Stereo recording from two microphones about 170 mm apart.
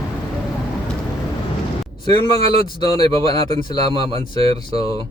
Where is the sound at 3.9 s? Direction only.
35° right (ahead or behind).